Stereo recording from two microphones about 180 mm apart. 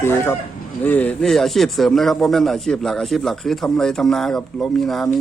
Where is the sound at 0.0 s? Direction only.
15° left (ahead or behind).